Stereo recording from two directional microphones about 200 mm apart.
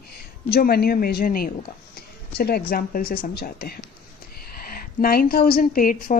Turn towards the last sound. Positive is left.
turn(degrees=45)  # may be behind; listen again after turning